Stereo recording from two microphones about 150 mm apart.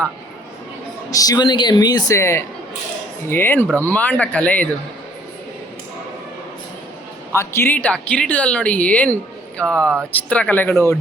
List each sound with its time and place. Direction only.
1.1 s speech: 25° left (ahead or behind)
7.3 s speech: 15° left (ahead or behind)